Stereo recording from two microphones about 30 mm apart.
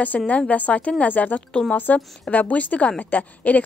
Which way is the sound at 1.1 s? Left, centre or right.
Left.